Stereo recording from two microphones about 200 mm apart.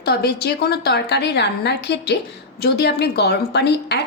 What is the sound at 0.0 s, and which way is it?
A woman's voice, 55° left (ahead or behind).